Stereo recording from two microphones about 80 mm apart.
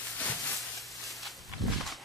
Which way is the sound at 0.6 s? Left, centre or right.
Centre.